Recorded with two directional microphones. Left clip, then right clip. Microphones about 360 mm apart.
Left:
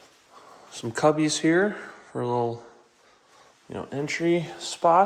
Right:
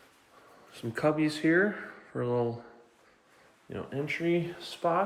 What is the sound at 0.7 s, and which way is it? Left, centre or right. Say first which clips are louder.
Speech: left 7 dB; centre.